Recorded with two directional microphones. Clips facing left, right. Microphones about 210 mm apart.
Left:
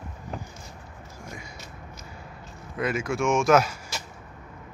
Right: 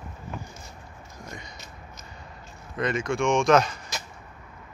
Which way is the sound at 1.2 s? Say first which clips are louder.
Even; 10° left (ahead or behind).